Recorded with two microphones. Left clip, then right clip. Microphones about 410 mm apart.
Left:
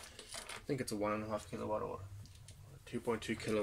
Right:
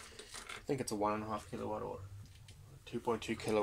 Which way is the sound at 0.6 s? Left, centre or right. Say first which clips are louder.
Right 3 dB; right.